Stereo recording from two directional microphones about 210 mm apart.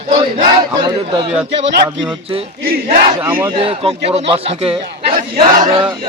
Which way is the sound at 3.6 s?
30° right (ahead or behind).